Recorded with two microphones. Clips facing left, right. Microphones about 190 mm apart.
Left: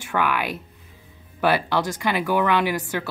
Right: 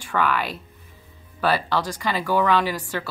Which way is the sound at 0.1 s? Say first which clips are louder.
Even; 15° left (ahead or behind).